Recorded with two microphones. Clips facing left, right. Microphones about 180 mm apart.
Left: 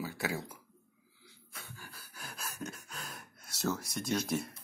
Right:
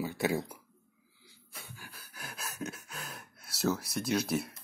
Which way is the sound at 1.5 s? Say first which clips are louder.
Right 1 dB; 15° right (ahead or behind).